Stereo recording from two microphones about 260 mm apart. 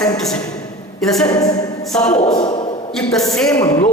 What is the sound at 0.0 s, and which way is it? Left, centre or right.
Speech, centre.